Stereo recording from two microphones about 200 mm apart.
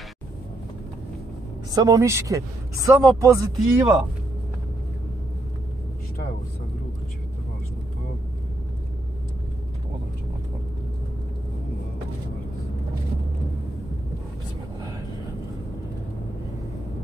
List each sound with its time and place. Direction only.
1.7 s speech: 15° right (ahead or behind)